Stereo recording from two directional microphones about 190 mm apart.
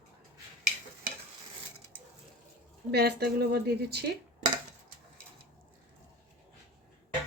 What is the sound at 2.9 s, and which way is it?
Speech, 60° right (ahead or behind).